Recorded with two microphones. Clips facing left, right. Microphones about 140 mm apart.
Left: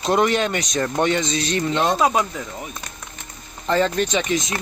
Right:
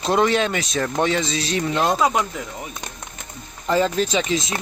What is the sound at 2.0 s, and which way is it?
Speech, 15° left (ahead or behind).